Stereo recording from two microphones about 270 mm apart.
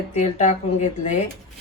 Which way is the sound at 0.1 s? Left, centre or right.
Left.